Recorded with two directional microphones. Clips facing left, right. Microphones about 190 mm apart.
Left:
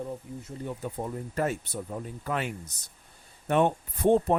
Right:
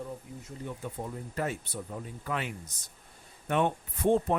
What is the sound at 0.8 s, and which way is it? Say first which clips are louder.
Speech: left 4 dB; 45° left (ahead or behind).